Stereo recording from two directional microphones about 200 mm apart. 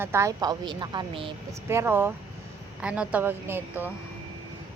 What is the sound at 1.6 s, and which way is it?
Speech, 10° right (ahead or behind).